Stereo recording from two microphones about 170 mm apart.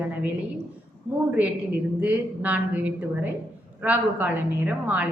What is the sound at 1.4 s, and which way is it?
A woman's voice, 10° right (ahead or behind).